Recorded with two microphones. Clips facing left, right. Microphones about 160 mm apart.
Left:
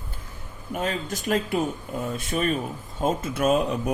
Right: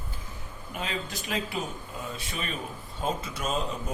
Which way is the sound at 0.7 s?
45° left (ahead or behind).